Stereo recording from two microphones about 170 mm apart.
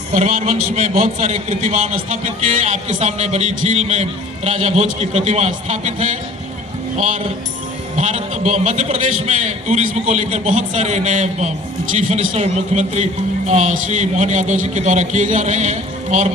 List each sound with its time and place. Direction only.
0.1 s a man's voice: 40° right (ahead or behind)
7.9 s a man's voice: 45° right (ahead or behind)